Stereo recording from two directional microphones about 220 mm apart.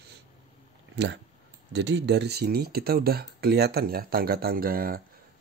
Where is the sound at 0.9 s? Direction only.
50° right (ahead or behind).